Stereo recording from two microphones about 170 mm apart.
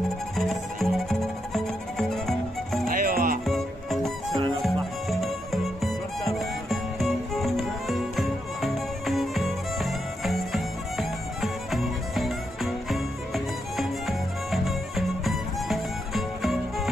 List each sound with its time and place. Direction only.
0.4 s music: centre (ahead or behind)
2.9 s music: 55° right (ahead or behind)
3.4 s music: centre (ahead or behind)